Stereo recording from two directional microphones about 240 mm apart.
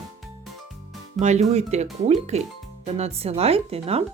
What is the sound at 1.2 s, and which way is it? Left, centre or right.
Speech, right.